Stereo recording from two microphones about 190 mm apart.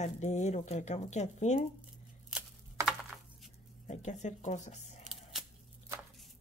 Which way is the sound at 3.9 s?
35° left (ahead or behind).